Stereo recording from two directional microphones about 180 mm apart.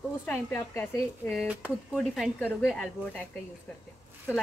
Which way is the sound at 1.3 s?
Centre (ahead or behind).